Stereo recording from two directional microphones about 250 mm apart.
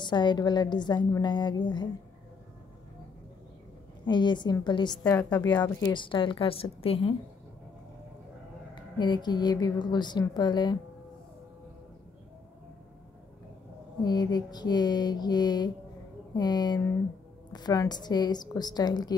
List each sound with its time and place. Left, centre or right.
0.0 s a woman's voice: centre
4.0 s a woman's voice: centre
8.7 s a woman's voice: centre
14.0 s a woman's voice: centre